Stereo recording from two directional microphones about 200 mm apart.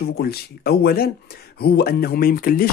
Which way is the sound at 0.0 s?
50° left (ahead or behind).